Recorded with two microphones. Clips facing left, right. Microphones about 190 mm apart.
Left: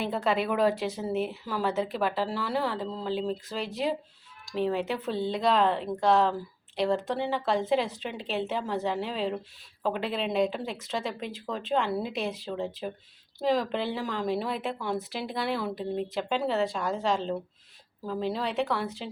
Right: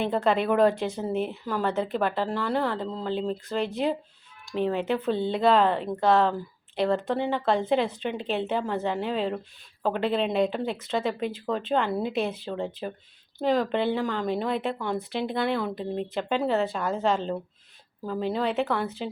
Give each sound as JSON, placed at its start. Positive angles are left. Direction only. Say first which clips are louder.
{"t": 0.0, "sound": "a woman's voice", "louder": "right 3 dB", "side_deg": 0}